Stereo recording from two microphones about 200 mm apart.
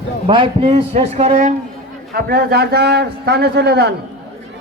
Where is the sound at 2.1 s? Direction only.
50° right (ahead or behind).